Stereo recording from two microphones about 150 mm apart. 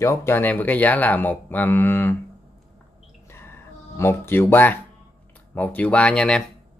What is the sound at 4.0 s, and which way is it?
Speech, 15° left (ahead or behind).